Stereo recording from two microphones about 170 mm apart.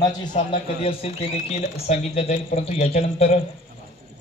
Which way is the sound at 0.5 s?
35° left (ahead or behind).